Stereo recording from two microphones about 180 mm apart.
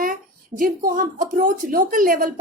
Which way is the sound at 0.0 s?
50° right (ahead or behind).